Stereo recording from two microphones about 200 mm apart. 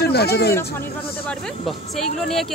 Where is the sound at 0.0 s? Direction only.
55° left (ahead or behind).